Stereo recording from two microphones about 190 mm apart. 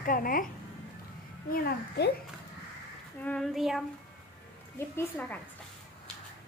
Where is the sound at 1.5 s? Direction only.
55° left (ahead or behind).